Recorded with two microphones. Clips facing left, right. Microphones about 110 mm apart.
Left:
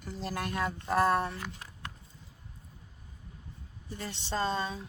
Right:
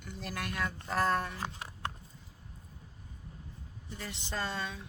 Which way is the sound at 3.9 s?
30° left (ahead or behind).